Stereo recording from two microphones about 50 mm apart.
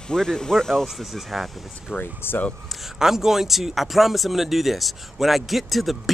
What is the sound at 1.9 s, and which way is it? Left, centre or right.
Speech, left.